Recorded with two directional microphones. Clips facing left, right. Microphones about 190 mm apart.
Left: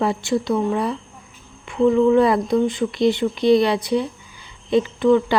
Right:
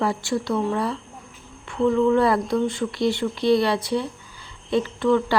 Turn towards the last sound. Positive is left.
turn(degrees=15)  # may be behind; listen again after turning